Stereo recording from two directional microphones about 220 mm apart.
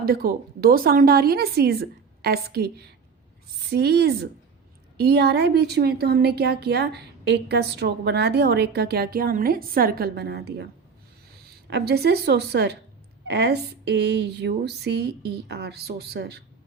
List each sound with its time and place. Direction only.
0.0 s speech: 45° right (ahead or behind)
11.7 s speech: 50° right (ahead or behind)